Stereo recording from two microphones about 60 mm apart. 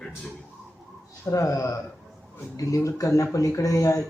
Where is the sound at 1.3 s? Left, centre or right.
Left.